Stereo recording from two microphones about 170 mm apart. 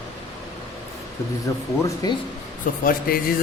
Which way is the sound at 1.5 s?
20° left (ahead or behind).